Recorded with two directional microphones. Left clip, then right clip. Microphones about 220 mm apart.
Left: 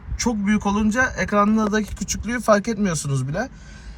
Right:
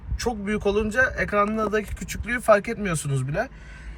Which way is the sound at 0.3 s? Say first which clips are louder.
Left 1 dB; 5° left (ahead or behind).